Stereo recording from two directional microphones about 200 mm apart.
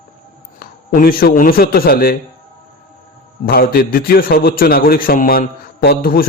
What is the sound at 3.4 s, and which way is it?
A man's voice, 45° left (ahead or behind).